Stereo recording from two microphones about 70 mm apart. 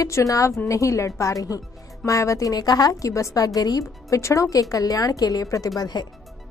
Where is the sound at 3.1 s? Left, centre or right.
Left.